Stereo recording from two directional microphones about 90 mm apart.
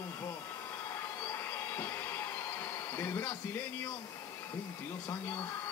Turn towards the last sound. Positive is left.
turn(degrees=25)  # may be behind; listen again after turning